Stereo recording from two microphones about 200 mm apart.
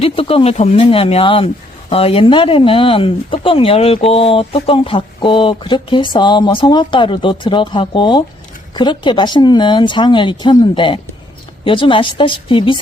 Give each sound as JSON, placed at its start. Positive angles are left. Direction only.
{"t": 0.0, "sound": "speech", "side_deg": 30}